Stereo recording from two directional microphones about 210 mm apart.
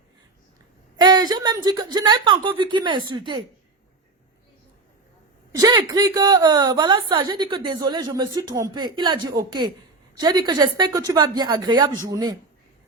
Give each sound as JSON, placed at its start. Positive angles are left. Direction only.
{"t": 0.9, "sound": "a woman's voice", "side_deg": -20}
{"t": 5.5, "sound": "a woman's voice", "side_deg": -15}